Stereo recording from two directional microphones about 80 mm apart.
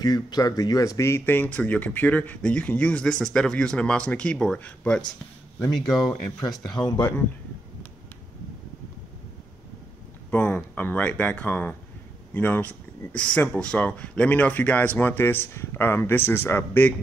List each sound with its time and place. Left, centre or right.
0.0 s speech: left; by 5.0 s centre
5.8 s speech: centre
6.7 s speech: left
7.0 s speech: left
10.3 s speech: centre